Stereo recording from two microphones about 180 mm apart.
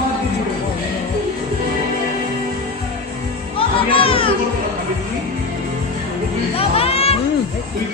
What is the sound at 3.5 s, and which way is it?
Music, 30° left (ahead or behind).